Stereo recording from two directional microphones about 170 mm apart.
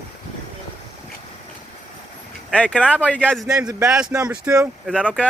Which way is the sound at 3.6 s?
15° right (ahead or behind).